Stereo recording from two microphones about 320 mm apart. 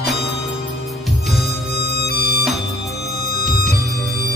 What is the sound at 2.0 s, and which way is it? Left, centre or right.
Music, left.